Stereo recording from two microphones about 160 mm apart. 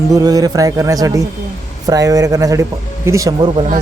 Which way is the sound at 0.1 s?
25° right (ahead or behind).